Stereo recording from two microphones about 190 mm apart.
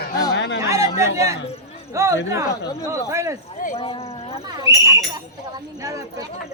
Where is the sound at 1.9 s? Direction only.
15° right (ahead or behind).